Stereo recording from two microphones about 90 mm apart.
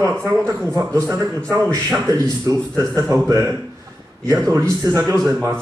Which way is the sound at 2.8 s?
40° right (ahead or behind).